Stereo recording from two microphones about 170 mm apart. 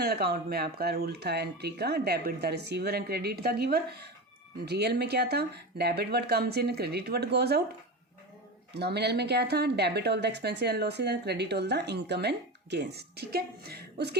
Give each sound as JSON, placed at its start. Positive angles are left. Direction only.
{"t": 0.0, "sound": "a woman's voice", "side_deg": -65}
{"t": 8.7, "sound": "a woman's voice", "side_deg": -75}